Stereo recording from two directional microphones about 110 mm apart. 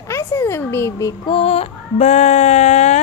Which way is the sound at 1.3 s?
60° left (ahead or behind).